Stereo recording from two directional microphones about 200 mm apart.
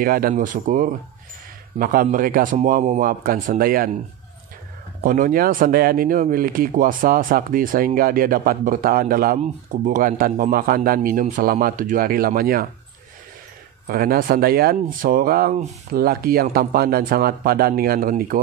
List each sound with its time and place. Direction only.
0.0 s speech: 45° right (ahead or behind)
5.0 s speech: 45° right (ahead or behind)
13.8 s speech: 45° right (ahead or behind)